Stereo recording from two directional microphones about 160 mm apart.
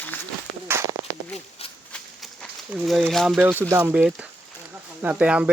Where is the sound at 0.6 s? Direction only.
15° right (ahead or behind).